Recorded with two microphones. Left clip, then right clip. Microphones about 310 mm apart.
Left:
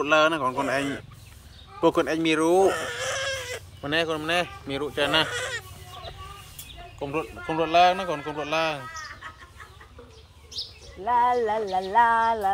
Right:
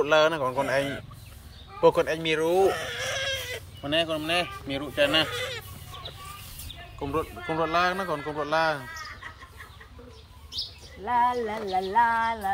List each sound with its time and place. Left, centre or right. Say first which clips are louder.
0.0 s a man's voice: left 1 dB; centre
7.0 s a man's voice: even; centre
11.1 s a sound: left 3 dB; left